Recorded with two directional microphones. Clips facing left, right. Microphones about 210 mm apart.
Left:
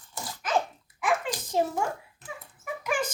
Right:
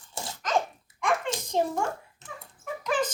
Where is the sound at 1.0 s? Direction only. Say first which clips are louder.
Even; 5° left (ahead or behind).